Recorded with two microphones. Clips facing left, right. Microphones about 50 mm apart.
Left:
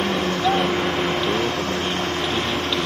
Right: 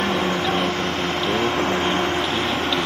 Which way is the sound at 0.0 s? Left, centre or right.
Centre.